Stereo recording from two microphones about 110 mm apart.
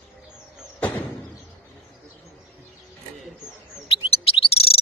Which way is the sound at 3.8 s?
60° left (ahead or behind).